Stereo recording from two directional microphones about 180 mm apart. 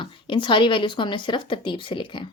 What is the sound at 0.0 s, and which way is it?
A woman's voice, 25° left (ahead or behind).